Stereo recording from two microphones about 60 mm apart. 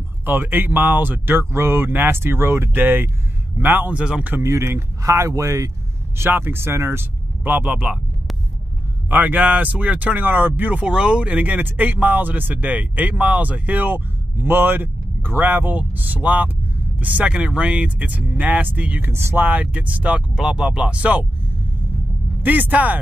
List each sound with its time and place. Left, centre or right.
0.2 s speech: right
3.9 s speech: centre
4.4 s speech: right
6.1 s speech: right
7.4 s speech: right
9.1 s speech: right
19.4 s speech: right
20.3 s speech: centre
22.4 s speech: right